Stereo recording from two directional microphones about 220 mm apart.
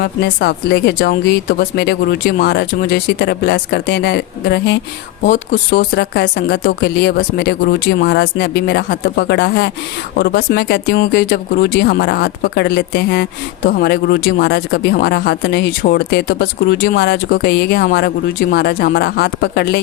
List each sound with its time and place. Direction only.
0.0 s speech: 50° left (ahead or behind)
5.2 s speech: 35° left (ahead or behind)
5.9 s speech: 50° left (ahead or behind)